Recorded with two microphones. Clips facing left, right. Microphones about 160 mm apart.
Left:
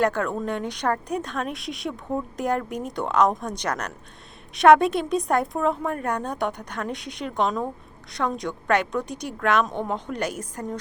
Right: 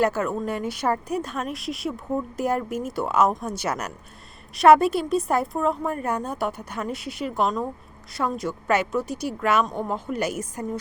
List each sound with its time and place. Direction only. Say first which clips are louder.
0.0 s speech: even; 5° right (ahead or behind)